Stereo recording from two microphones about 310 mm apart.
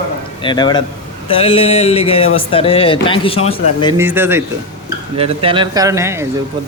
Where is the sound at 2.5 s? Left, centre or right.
Centre.